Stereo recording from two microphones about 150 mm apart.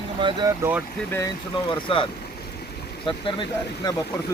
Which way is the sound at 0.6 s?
10° right (ahead or behind).